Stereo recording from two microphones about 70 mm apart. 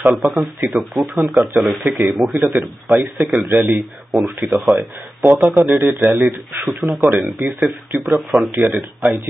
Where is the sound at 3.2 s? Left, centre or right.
Right.